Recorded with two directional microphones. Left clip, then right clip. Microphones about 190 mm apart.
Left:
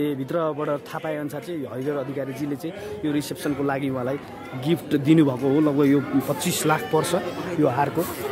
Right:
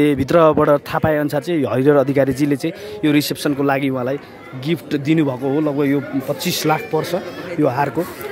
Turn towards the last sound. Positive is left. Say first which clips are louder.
# right 4 dB
turn(degrees=-20)  # may be behind; listen again after turning